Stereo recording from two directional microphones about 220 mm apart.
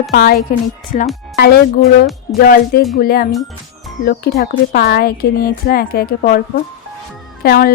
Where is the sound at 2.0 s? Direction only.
Centre (ahead or behind).